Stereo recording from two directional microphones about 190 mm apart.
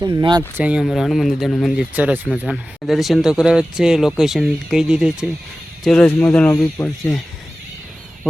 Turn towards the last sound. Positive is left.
turn(degrees=5)  # may be behind; listen again after turning